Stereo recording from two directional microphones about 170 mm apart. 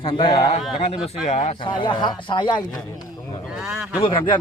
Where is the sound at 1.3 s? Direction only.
40° left (ahead or behind).